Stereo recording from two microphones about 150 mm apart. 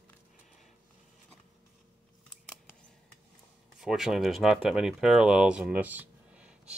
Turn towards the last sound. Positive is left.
turn(degrees=-10)  # may be behind; listen again after turning